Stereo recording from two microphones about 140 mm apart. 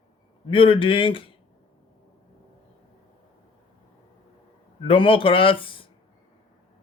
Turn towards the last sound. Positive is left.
turn(degrees=40)  # may be behind; listen again after turning